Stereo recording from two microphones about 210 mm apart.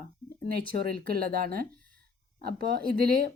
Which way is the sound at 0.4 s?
45° right (ahead or behind).